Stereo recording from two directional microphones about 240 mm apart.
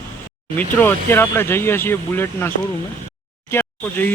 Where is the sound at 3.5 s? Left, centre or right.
Centre.